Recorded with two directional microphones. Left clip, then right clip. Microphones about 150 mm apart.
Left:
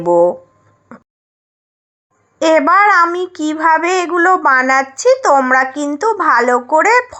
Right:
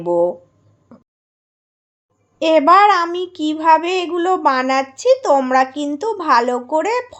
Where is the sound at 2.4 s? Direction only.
5° left (ahead or behind).